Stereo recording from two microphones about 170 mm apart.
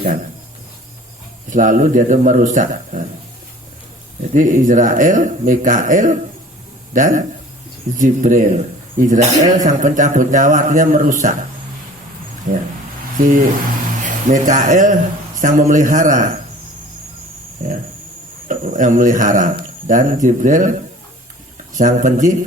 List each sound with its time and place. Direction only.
1.5 s speech: 50° right (ahead or behind)
4.2 s speech: 50° right (ahead or behind)
12.5 s speech: 45° right (ahead or behind)
18.4 s speech: 50° right (ahead or behind)